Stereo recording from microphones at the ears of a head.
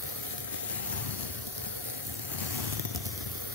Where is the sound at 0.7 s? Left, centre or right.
Left.